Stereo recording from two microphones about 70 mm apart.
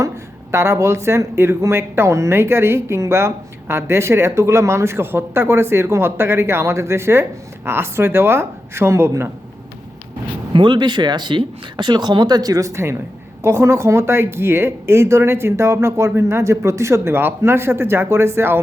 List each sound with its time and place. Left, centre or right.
0.5 s speech: right
10.7 s speech: right